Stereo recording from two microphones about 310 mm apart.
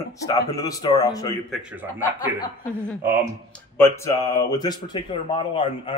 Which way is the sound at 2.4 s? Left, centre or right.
Centre.